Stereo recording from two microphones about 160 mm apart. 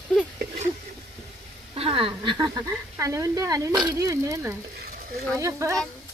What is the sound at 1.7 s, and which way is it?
Speech, 35° right (ahead or behind).